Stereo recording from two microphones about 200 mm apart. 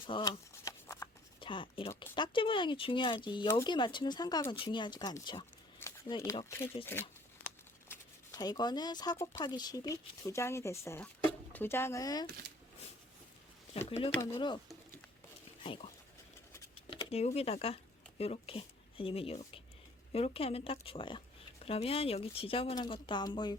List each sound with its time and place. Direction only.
0.0 s a sound: 25° left (ahead or behind)
1.4 s a sound: 25° left (ahead or behind)
2.1 s speech: 25° left (ahead or behind)
6.9 s speech: 10° left (ahead or behind)
13.7 s speech: 35° left (ahead or behind)
14.3 s speech: 25° left (ahead or behind)
15.6 s speech: 25° left (ahead or behind)
16.9 s speech: 30° left (ahead or behind)